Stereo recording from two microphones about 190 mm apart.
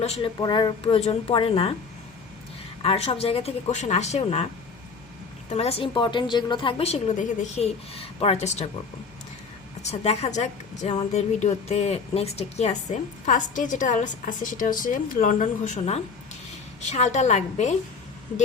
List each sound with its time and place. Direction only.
0.0 s speech: 35° left (ahead or behind)
0.3 s a woman's voice: 20° left (ahead or behind)
2.8 s a woman's voice: 30° left (ahead or behind)
5.5 s a woman's voice: 30° left (ahead or behind)
9.8 s a woman's voice: 35° left (ahead or behind)